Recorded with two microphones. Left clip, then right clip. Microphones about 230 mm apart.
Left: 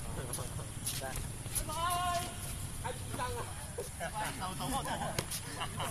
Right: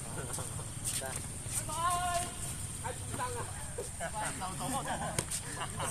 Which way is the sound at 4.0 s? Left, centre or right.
Centre.